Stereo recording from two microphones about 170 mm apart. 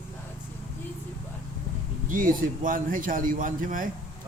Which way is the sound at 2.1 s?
55° right (ahead or behind).